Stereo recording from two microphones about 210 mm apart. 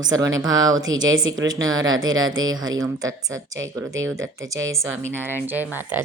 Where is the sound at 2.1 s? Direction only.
70° right (ahead or behind).